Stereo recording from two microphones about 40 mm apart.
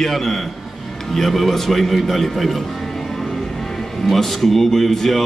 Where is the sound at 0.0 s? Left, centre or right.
Centre.